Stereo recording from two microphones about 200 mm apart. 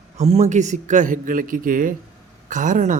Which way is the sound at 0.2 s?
35° right (ahead or behind).